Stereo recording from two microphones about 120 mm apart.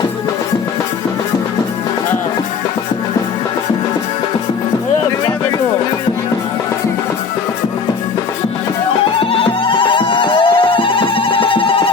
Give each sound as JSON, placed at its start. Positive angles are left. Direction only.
{"t": 9.3, "sound": "music", "side_deg": 45}